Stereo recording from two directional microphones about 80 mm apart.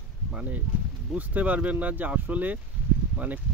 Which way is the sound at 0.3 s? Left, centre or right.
Centre.